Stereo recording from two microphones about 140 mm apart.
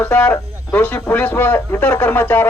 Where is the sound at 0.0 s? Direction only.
10° left (ahead or behind).